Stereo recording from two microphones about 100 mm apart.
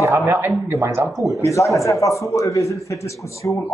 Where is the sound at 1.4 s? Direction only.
30° left (ahead or behind).